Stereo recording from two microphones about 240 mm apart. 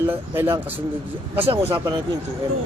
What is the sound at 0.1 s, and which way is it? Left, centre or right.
A man's voice, centre.